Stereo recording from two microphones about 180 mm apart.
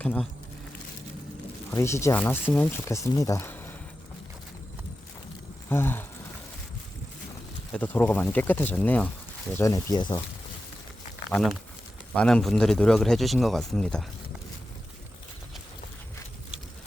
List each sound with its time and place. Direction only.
0.0 s speech: 5° left (ahead or behind)
1.7 s speech: 15° left (ahead or behind)
5.6 s speech: 10° left (ahead or behind)
7.7 s speech: 10° left (ahead or behind)
11.3 s speech: centre (ahead or behind)